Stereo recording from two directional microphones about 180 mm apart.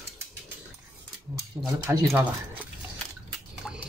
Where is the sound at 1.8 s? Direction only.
15° right (ahead or behind).